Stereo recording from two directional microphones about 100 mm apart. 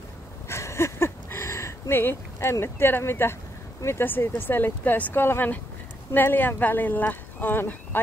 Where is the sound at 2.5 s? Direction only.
25° left (ahead or behind).